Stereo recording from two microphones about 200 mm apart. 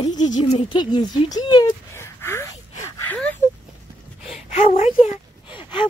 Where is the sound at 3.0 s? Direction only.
10° left (ahead or behind).